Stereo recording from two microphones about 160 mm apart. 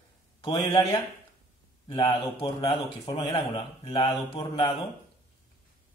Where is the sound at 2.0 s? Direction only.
35° left (ahead or behind).